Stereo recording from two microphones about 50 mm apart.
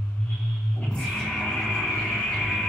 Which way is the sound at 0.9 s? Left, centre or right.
Centre.